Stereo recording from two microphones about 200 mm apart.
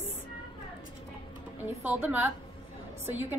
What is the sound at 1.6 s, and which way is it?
A woman's voice, 10° right (ahead or behind).